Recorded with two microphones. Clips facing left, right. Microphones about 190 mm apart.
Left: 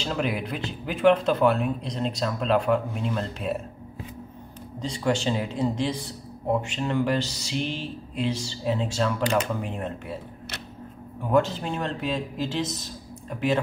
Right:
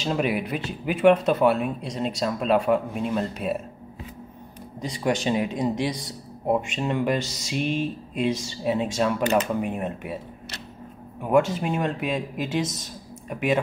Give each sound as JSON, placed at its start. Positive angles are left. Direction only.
{"t": 0.0, "sound": "speech", "side_deg": -15}
{"t": 4.8, "sound": "speech", "side_deg": -15}
{"t": 11.6, "sound": "speech", "side_deg": -15}